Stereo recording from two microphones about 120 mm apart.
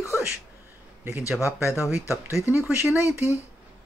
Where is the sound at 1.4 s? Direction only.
25° left (ahead or behind).